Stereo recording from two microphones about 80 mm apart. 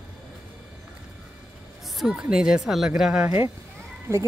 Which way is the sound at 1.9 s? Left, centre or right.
Centre.